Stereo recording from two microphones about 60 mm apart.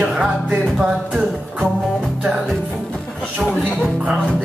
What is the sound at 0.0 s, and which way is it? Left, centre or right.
Music, centre.